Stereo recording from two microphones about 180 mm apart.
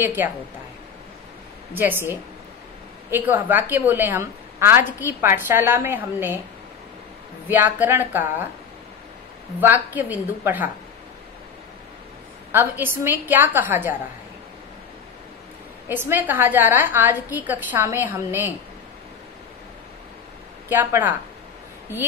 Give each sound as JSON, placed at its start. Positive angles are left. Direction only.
{"t": 0.0, "sound": "a woman's voice", "side_deg": -10}
{"t": 1.7, "sound": "a woman's voice", "side_deg": -10}
{"t": 7.4, "sound": "a woman's voice", "side_deg": -10}
{"t": 9.6, "sound": "a woman's voice", "side_deg": -10}
{"t": 12.5, "sound": "a woman's voice", "side_deg": -10}
{"t": 15.9, "sound": "a woman's voice", "side_deg": -10}
{"t": 20.6, "sound": "a woman's voice", "side_deg": -10}